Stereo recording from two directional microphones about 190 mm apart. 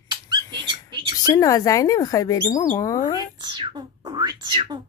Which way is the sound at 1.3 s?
15° left (ahead or behind).